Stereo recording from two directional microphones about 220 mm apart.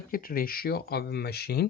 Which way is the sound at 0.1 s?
40° left (ahead or behind).